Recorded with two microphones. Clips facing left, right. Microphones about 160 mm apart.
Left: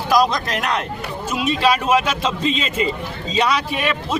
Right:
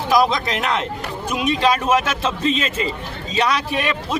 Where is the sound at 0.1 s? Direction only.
Centre (ahead or behind).